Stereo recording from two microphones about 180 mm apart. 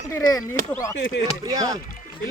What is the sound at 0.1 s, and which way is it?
Speech, 20° left (ahead or behind).